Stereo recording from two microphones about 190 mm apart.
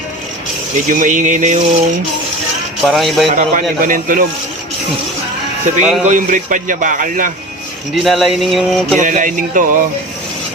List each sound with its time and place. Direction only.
0.9 s a sound: 40° right (ahead or behind)
2.8 s speech: centre (ahead or behind)
3.3 s a man's voice: 45° right (ahead or behind)
5.7 s a sound: 40° right (ahead or behind)
6.1 s a man's voice: 45° right (ahead or behind)
7.9 s speech: centre (ahead or behind)
9.0 s a man's voice: 45° right (ahead or behind)